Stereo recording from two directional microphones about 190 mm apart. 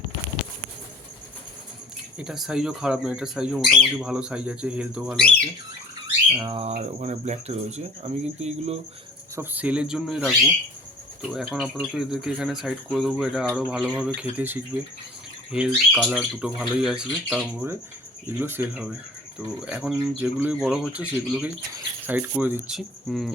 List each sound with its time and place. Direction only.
2.1 s speech: centre (ahead or behind)
6.5 s speech: 35° right (ahead or behind)
9.3 s speech: 10° right (ahead or behind)